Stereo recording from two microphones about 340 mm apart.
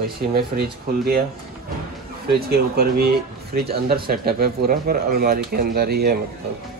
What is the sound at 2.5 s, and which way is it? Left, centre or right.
Speech, right.